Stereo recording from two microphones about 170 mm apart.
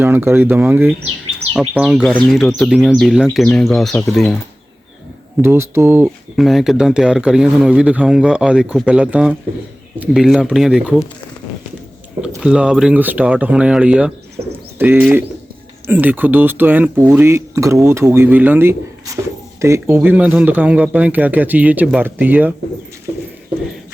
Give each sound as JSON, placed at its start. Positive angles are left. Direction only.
{"t": 0.0, "sound": "speech", "side_deg": -10}
{"t": 1.5, "sound": "speech", "side_deg": 0}
{"t": 5.4, "sound": "speech", "side_deg": -15}
{"t": 6.3, "sound": "speech", "side_deg": 0}
{"t": 12.4, "sound": "speech", "side_deg": -5}
{"t": 14.4, "sound": "bird", "side_deg": -40}
{"t": 14.8, "sound": "speech", "side_deg": -10}